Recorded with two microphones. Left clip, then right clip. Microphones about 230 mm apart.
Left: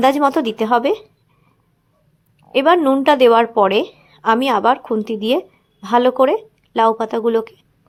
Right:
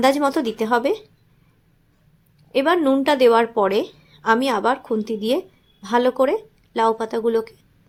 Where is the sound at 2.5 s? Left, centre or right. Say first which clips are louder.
Left 5 dB; centre.